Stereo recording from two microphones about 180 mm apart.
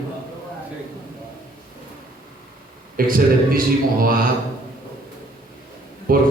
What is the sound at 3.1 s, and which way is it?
Speech, 50° right (ahead or behind).